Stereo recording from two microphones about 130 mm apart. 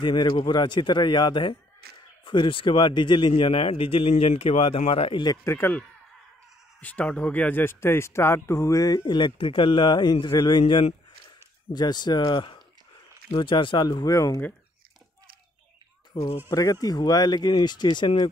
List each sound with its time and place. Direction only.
0.0 s a man's voice: 35° left (ahead or behind)
5.2 s a man's voice: 25° left (ahead or behind)
16.4 s a man's voice: 25° left (ahead or behind)